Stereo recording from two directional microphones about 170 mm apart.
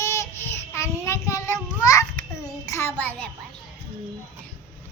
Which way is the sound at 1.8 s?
20° left (ahead or behind).